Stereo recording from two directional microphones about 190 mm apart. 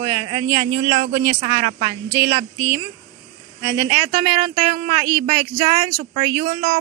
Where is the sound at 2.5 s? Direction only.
15° right (ahead or behind).